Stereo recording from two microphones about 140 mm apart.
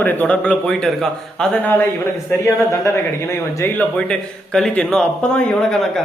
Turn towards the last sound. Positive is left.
turn(degrees=5)  # may be behind; listen again after turning